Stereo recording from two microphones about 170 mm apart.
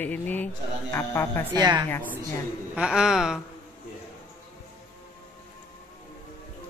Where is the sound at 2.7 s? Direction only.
5° right (ahead or behind).